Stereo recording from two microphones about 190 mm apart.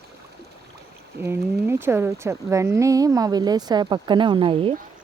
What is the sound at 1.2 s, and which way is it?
Speech, 10° right (ahead or behind).